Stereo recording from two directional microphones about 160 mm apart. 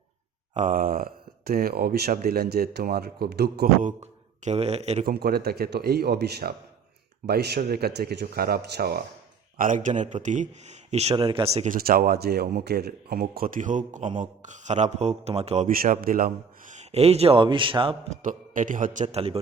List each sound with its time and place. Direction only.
0.5 s speech: 50° right (ahead or behind); by 3.7 s 85° right
4.4 s a man's voice: 40° right (ahead or behind)
5.0 s speech: 75° right (ahead or behind)
9.6 s a man's voice: 55° right (ahead or behind)
11.1 s a man's voice: 30° right (ahead or behind)
11.7 s a man's voice: 70° right (ahead or behind); by 15.7 s 40° right (ahead or behind)
15.7 s a man's voice: 65° right (ahead or behind); by 17.9 s 30° right (ahead or behind)
18.1 s a man's voice: 55° right (ahead or behind)
19.1 s a man's voice: 35° right (ahead or behind)